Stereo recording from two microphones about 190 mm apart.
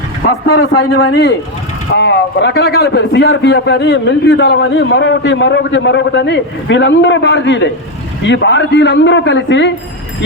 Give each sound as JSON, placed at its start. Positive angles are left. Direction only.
{"t": 0.4, "sound": "a man's voice", "side_deg": 65}